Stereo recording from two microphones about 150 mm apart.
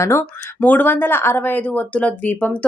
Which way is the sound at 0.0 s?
15° left (ahead or behind).